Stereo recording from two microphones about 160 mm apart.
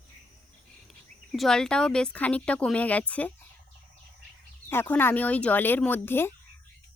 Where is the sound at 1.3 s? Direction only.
5° left (ahead or behind).